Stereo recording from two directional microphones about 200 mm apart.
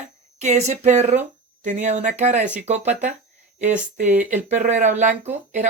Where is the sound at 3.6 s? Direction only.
35° right (ahead or behind).